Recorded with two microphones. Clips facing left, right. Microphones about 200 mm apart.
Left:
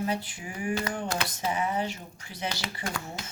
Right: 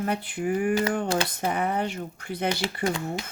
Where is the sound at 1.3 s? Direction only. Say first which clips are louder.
Right 3 dB; 60° right (ahead or behind).